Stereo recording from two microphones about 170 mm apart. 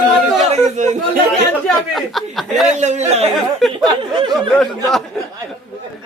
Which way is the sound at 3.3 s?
Centre (ahead or behind).